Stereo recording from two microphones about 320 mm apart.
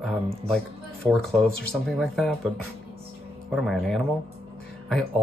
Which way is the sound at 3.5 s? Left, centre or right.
Centre.